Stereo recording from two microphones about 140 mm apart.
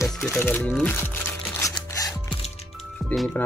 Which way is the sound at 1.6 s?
25° left (ahead or behind).